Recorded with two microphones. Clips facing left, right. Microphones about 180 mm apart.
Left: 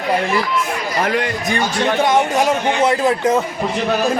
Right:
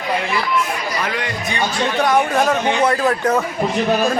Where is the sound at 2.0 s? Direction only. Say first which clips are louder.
Right 1 dB; 20° left (ahead or behind).